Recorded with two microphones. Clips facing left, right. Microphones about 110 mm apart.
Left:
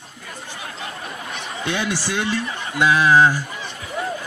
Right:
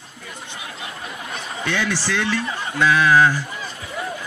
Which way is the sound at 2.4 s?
30° right (ahead or behind).